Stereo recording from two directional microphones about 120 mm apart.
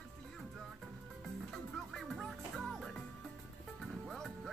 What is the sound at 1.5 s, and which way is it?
Music, centre (ahead or behind).